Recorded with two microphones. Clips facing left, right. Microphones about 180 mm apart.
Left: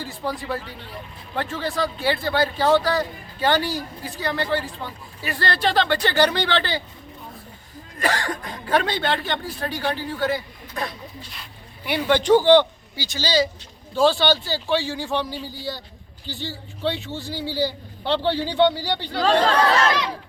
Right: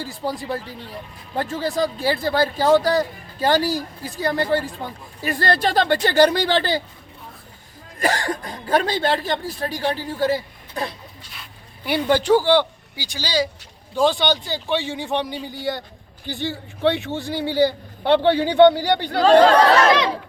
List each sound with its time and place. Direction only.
0.2 s a woman's voice: 35° right (ahead or behind)
7.9 s a woman's voice: 40° right (ahead or behind)
12.0 s a man's voice: 10° right (ahead or behind)
16.2 s a man's voice: 55° right (ahead or behind)
19.9 s crowd: 70° right (ahead or behind)